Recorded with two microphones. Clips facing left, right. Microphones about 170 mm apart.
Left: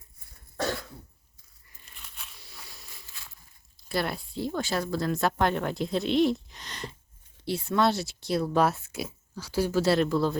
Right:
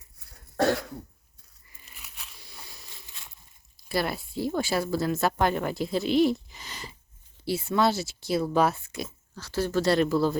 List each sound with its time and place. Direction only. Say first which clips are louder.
0.2 s cough: right 7 dB; 65° right (ahead or behind)
1.8 s biting: even; centre (ahead or behind)
3.1 s a sound: even; 20° right (ahead or behind)
3.8 s speech: right 1 dB; centre (ahead or behind)